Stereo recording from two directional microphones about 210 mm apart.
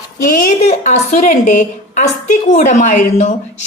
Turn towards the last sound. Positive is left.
turn(degrees=35)  # may be behind; listen again after turning